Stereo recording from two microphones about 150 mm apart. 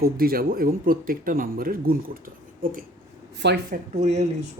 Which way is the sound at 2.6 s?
70° right (ahead or behind).